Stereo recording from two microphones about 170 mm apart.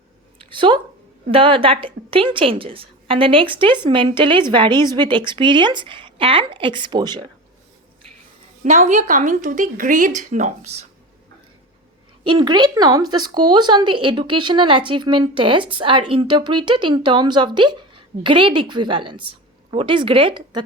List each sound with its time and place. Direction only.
0.3 s a sound: 30° right (ahead or behind)
1.3 s speech: 30° right (ahead or behind)
8.6 s speech: 45° right (ahead or behind)
12.2 s speech: 30° right (ahead or behind)